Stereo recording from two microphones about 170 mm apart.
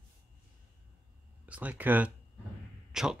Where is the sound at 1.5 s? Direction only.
10° right (ahead or behind).